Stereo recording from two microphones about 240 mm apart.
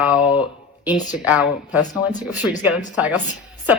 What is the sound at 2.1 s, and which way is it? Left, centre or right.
Speech, left.